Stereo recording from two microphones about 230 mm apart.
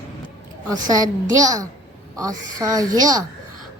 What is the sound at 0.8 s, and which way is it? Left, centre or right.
A woman's voice, centre.